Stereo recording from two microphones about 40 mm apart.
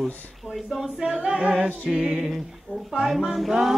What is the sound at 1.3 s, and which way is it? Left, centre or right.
Choir, right.